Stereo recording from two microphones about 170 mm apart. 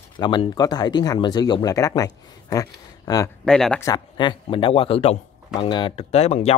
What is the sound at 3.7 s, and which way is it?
Speech, 20° left (ahead or behind).